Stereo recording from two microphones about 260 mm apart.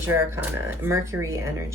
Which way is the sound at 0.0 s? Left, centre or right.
Centre.